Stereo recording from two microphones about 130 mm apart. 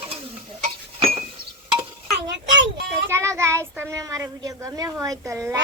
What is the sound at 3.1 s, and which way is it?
A child's voice, 20° right (ahead or behind).